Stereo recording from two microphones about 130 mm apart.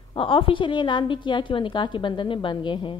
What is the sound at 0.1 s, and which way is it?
A woman's voice, 40° left (ahead or behind).